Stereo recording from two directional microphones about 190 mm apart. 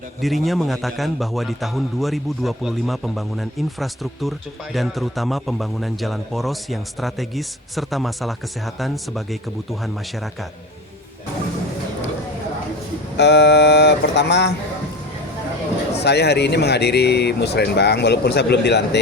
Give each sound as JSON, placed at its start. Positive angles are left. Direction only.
{"t": 0.2, "sound": "a man's voice", "side_deg": 0}
{"t": 13.1, "sound": "speech", "side_deg": 65}
{"t": 16.0, "sound": "speech", "side_deg": 60}